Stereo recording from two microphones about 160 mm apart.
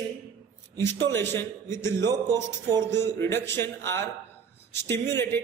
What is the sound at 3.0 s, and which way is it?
Speech, 15° left (ahead or behind).